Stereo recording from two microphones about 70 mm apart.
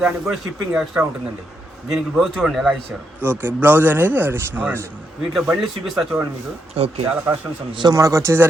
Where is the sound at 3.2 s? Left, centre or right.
Right.